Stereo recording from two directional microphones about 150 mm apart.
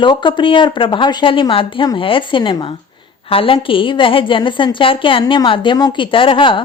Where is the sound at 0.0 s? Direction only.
30° left (ahead or behind).